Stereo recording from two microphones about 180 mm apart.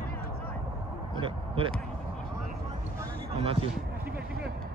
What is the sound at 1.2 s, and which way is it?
Vehicle, 30° right (ahead or behind).